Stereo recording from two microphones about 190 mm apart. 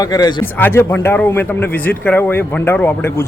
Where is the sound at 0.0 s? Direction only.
20° left (ahead or behind).